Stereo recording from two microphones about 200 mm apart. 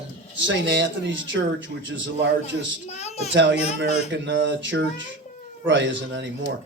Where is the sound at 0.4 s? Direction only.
65° right (ahead or behind).